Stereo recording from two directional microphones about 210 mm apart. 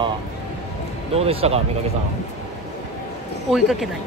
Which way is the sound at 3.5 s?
Centre (ahead or behind).